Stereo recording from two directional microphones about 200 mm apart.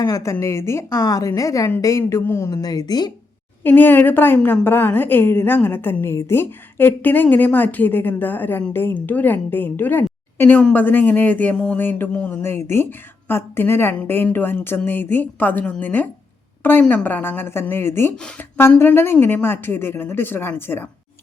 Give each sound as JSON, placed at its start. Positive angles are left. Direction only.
{"t": 0.0, "sound": "a woman's voice", "side_deg": 15}
{"t": 3.6, "sound": "a woman's voice", "side_deg": 10}